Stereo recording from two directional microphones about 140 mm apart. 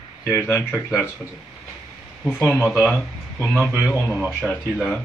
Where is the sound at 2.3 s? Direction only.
10° left (ahead or behind).